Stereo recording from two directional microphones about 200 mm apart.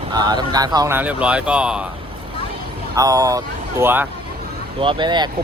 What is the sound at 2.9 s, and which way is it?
Speech, 15° right (ahead or behind).